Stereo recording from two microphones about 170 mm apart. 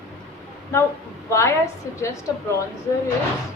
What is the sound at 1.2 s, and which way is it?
Speech, 15° left (ahead or behind).